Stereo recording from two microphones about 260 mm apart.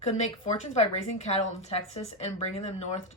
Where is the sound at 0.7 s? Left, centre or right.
Left.